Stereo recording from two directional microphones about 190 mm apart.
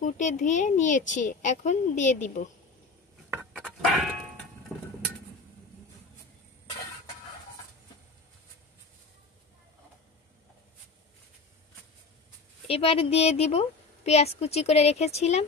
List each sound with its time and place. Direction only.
0.0 s a woman's voice: 40° left (ahead or behind)
3.3 s a sound: 5° right (ahead or behind)
12.6 s a woman's voice: 30° left (ahead or behind)